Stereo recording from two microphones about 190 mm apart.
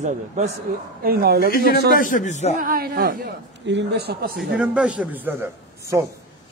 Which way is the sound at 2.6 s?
50° right (ahead or behind).